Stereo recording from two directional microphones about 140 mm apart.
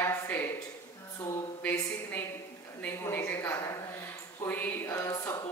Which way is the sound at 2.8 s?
15° left (ahead or behind).